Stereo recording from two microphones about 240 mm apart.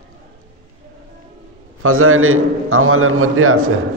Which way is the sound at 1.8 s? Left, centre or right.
Right.